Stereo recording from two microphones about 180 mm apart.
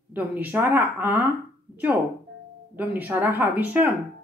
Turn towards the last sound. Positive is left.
turn(degrees=-10)  # may be behind; listen again after turning